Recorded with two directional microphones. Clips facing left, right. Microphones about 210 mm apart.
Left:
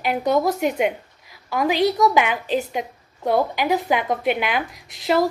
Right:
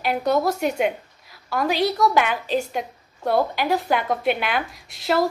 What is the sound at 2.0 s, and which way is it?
Speech, 10° left (ahead or behind).